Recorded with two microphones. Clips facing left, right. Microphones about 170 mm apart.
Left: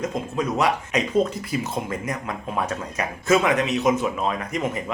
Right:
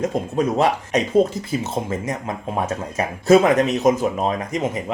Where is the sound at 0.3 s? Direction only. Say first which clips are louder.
Right 3 dB; 35° right (ahead or behind).